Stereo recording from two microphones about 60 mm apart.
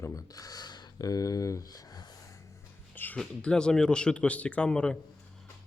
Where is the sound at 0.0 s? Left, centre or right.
Left.